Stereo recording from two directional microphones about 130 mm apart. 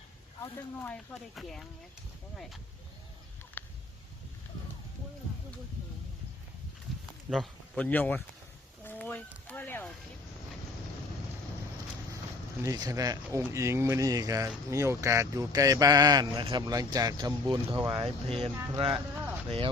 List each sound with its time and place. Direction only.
0.4 s speech: 15° left (ahead or behind)
1.4 s speech: centre (ahead or behind)
3.6 s a sound: 15° left (ahead or behind)
7.3 s speech: 5° left (ahead or behind)
8.8 s a sound: 15° left (ahead or behind)
12.6 s speech: 25° right (ahead or behind); by 18.5 s 50° right (ahead or behind)
18.7 s speech: 35° right (ahead or behind)
19.5 s speech: 45° right (ahead or behind)